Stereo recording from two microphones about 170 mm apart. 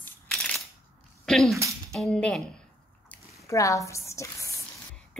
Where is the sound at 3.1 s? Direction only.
20° left (ahead or behind).